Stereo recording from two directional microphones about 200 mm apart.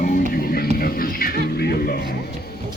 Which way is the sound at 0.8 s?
45° left (ahead or behind).